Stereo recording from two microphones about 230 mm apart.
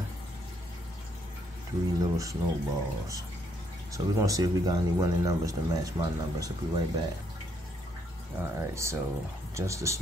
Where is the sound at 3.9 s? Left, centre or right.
Centre.